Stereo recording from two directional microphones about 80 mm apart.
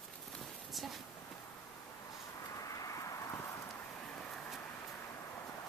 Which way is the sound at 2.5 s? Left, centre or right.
Left.